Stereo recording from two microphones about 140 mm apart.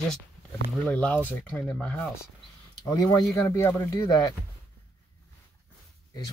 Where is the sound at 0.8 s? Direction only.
5° left (ahead or behind).